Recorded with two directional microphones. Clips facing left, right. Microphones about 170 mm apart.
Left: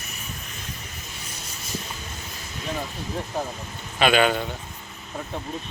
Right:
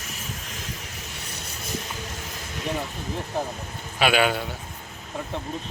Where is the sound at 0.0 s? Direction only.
90° right.